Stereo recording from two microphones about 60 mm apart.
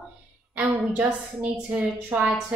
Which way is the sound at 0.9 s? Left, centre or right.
Right.